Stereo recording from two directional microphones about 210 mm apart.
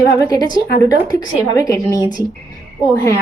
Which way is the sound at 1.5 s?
15° left (ahead or behind).